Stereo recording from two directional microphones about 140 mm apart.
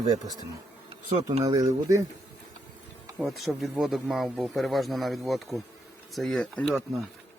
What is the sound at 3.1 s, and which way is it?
Speech, centre (ahead or behind).